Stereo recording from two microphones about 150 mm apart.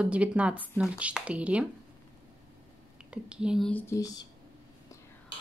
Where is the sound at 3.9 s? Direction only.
25° left (ahead or behind).